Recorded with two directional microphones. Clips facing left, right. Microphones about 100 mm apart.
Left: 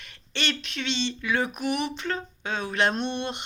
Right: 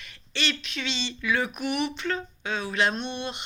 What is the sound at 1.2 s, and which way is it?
Speech, 25° left (ahead or behind).